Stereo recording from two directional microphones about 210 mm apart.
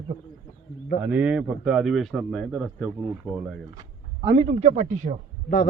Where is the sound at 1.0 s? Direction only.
5° right (ahead or behind).